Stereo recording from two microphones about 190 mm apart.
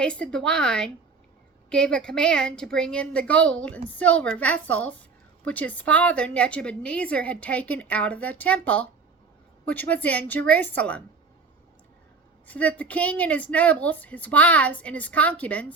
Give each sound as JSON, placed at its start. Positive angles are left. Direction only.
{"t": 0.0, "sound": "a woman's voice", "side_deg": 5}
{"t": 12.5, "sound": "a woman's voice", "side_deg": 5}